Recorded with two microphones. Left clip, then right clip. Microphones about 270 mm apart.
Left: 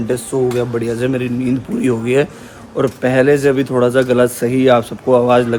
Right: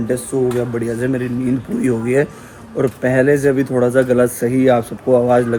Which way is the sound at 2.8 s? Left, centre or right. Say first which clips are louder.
Left 2 dB; centre.